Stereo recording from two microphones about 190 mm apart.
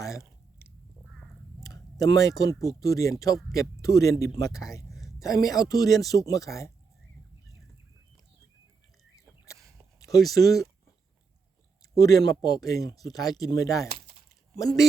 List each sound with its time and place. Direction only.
0.0 s chewing: 15° left (ahead or behind)
1.6 s speech: 20° left (ahead or behind)
4.9 s a sound: centre (ahead or behind)
5.2 s speech: 20° left (ahead or behind)
10.0 s a sound: 20° left (ahead or behind)
10.3 s speech: 20° left (ahead or behind)
11.9 s speech: 20° left (ahead or behind)